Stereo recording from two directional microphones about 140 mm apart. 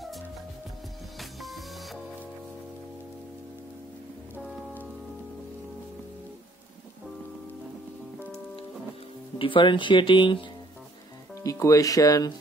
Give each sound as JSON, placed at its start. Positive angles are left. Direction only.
{"t": 1.4, "sound": "music", "side_deg": 0}
{"t": 9.4, "sound": "speech", "side_deg": 35}
{"t": 11.4, "sound": "speech", "side_deg": 25}